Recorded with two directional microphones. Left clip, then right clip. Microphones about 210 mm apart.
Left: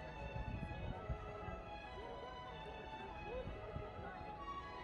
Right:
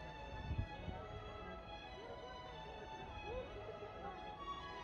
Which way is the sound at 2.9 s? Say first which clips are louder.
Even; 50° right (ahead or behind).